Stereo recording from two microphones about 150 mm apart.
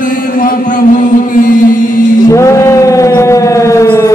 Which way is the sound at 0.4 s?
65° left (ahead or behind).